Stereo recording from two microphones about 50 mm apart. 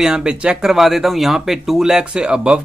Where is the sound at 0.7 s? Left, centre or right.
Centre.